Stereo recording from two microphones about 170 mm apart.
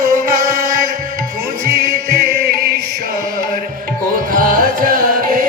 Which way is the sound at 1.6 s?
65° right (ahead or behind).